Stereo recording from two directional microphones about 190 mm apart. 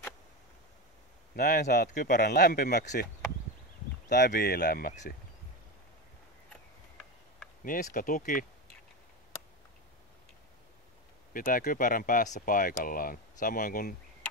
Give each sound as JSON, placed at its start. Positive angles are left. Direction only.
{"t": 1.3, "sound": "speech", "side_deg": 50}
{"t": 2.8, "sound": "speech", "side_deg": 40}
{"t": 4.3, "sound": "speech", "side_deg": 55}
{"t": 7.6, "sound": "speech", "side_deg": 45}
{"t": 11.3, "sound": "speech", "side_deg": 45}